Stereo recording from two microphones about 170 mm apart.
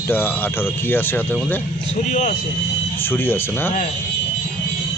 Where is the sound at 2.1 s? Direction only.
50° left (ahead or behind).